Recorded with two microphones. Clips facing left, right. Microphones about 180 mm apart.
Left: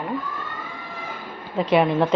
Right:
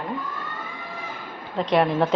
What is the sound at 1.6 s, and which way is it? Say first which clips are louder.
Speech: left 2 dB; 5° left (ahead or behind).